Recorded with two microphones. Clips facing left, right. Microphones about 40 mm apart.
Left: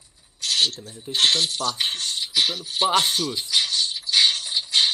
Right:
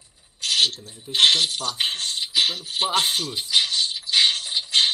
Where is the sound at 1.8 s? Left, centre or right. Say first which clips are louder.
Right 1 dB; right.